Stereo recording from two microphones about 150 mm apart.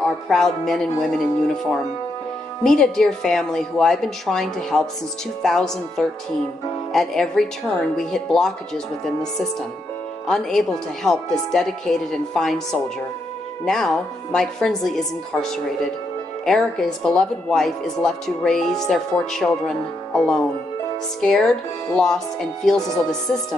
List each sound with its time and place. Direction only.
0.3 s speech: centre (ahead or behind)
2.6 s speech: centre (ahead or behind)
10.2 s speech: 5° left (ahead or behind)
16.4 s speech: 5° left (ahead or behind)